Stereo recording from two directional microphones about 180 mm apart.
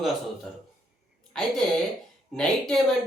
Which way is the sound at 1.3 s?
5° left (ahead or behind).